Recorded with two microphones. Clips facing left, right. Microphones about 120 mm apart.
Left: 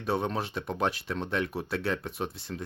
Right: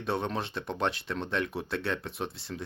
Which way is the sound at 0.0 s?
Centre (ahead or behind).